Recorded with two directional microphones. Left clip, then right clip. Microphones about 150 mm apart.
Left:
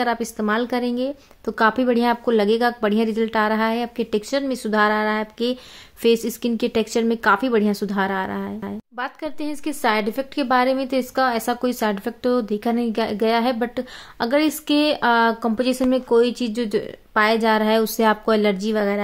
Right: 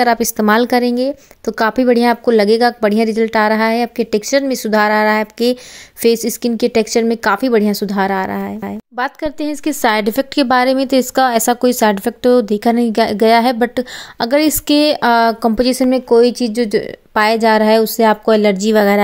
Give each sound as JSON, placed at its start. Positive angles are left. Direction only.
{"t": 0.0, "sound": "a woman's voice", "side_deg": -40}
{"t": 17.1, "sound": "a woman's voice", "side_deg": -50}